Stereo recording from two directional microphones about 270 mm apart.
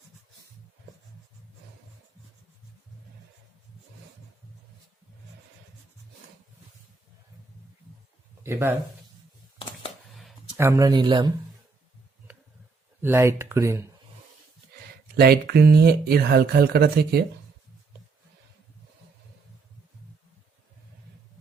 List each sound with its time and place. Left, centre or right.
8.4 s speech: centre
10.2 s speech: centre
13.0 s speech: centre
15.1 s speech: right